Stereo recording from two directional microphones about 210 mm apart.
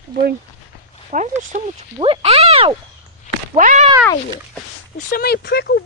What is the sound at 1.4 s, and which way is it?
Speech, 35° right (ahead or behind).